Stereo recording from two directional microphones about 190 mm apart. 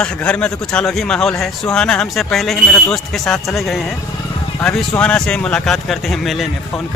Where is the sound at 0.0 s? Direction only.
5° left (ahead or behind).